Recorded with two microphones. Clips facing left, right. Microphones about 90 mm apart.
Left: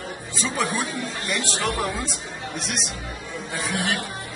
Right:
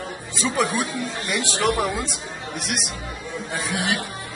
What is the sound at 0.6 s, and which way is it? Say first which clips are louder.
Speech: right 2 dB; 15° right (ahead or behind).